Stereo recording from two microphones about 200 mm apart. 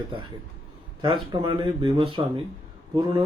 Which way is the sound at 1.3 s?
25° right (ahead or behind).